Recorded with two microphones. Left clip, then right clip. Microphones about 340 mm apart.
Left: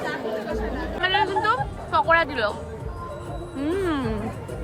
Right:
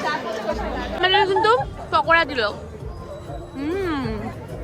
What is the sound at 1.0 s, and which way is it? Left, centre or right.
Speech, centre.